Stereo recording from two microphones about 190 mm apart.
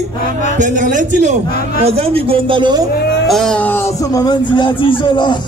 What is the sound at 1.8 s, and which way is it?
A man's voice, 30° right (ahead or behind).